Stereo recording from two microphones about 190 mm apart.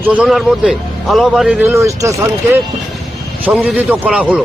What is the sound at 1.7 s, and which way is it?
Speech, 15° right (ahead or behind).